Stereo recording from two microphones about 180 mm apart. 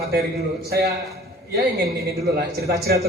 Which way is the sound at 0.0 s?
60° right (ahead or behind).